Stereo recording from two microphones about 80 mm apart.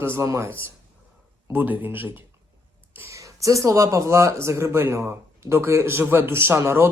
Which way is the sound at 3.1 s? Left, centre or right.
Right.